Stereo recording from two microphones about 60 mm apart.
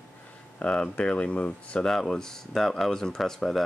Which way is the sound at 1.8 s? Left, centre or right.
Centre.